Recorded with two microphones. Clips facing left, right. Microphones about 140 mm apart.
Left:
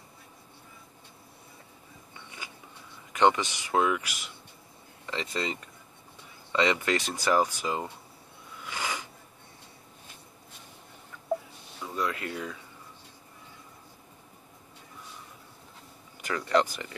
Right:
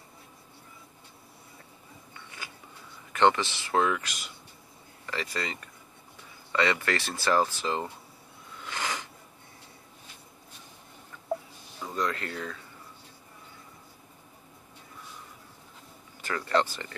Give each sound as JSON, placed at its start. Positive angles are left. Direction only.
{"t": 3.1, "sound": "speech", "side_deg": 15}
{"t": 5.0, "sound": "speech", "side_deg": 20}
{"t": 8.6, "sound": "a sound", "side_deg": 10}
{"t": 11.8, "sound": "speech", "side_deg": 5}
{"t": 16.2, "sound": "speech", "side_deg": 15}